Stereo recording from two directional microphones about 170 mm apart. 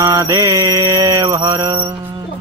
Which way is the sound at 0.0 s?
20° right (ahead or behind).